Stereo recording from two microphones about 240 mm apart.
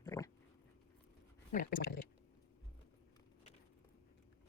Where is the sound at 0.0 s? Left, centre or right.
Centre.